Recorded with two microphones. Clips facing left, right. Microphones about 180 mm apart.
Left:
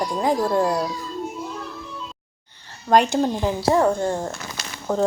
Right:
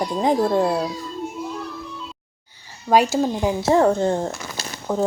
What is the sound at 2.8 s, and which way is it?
Speech, 5° right (ahead or behind).